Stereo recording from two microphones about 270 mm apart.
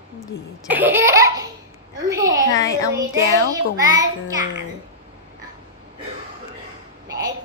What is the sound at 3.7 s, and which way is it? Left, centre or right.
Speech, centre.